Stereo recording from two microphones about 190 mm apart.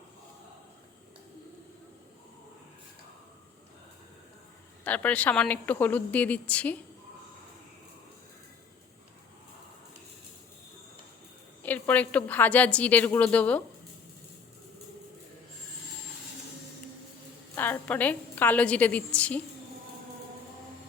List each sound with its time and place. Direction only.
4.8 s speech: 10° left (ahead or behind)
11.6 s speech: 10° left (ahead or behind)
17.5 s a woman's voice: 10° left (ahead or behind)